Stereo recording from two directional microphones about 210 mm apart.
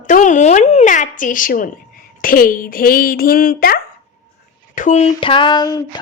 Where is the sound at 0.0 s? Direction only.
35° left (ahead or behind).